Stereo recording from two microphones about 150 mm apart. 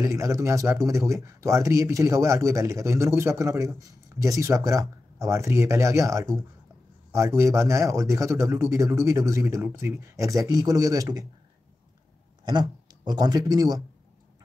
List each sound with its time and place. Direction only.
0.0 s speech: 20° right (ahead or behind)
12.4 s speech: 30° right (ahead or behind)